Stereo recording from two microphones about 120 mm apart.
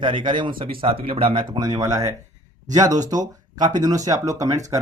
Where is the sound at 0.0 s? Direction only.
45° right (ahead or behind).